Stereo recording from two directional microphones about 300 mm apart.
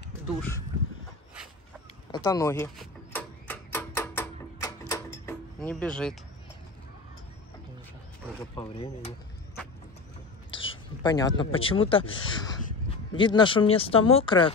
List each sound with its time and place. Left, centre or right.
0.4 s a woman's voice: centre
2.1 s speech: centre
3.1 s music: centre
8.5 s speech: centre
10.5 s a woman's voice: centre